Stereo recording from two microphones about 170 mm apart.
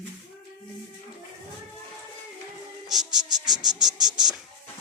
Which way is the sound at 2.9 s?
5° right (ahead or behind).